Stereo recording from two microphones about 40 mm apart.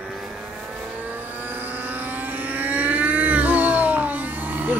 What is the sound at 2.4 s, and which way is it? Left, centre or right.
Vehicle, right.